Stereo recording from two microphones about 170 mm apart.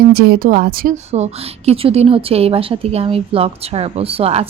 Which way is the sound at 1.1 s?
40° right (ahead or behind).